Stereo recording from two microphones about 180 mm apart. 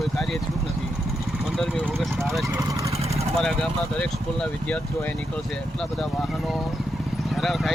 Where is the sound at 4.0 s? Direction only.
5° left (ahead or behind).